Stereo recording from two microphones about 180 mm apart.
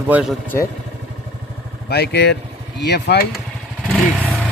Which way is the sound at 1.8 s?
65° left (ahead or behind).